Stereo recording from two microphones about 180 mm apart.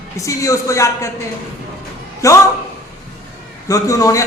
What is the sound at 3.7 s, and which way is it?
Speech, 20° left (ahead or behind).